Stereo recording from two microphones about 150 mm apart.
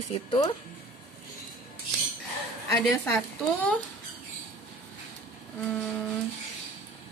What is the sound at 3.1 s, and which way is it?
Speech, 10° left (ahead or behind).